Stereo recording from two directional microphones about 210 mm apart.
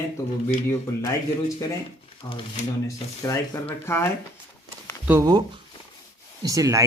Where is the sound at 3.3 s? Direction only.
10° left (ahead or behind).